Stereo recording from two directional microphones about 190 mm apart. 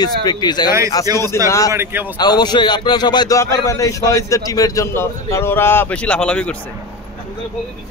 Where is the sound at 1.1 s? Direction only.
20° right (ahead or behind).